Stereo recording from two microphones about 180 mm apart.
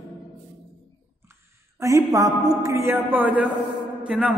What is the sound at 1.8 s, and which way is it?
A man's voice, 20° right (ahead or behind).